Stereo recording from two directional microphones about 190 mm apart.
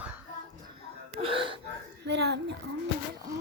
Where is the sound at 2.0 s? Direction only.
60° right (ahead or behind).